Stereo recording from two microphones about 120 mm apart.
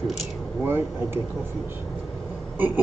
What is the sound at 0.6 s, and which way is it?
Speech, 20° right (ahead or behind).